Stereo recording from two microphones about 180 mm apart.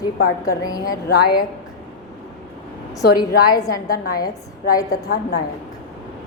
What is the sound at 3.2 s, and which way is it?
Speech, 20° left (ahead or behind).